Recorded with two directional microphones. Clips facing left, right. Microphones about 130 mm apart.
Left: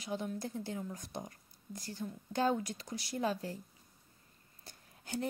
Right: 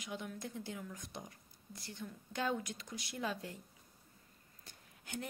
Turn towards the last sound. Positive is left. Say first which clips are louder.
# left 5 dB
turn(degrees=35)  # may be behind; listen again after turning